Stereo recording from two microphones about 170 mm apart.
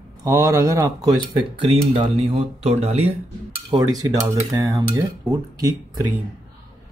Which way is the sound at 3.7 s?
20° right (ahead or behind).